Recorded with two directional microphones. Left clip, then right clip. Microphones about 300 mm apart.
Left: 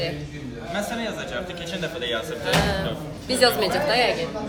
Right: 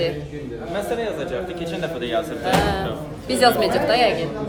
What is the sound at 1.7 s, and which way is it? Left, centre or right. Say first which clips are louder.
Speech: right 3 dB; right.